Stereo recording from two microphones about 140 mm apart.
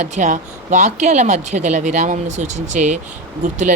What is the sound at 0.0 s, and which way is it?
Speech, 60° right (ahead or behind).